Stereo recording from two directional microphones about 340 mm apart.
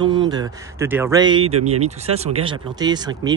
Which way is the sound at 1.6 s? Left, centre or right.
Right.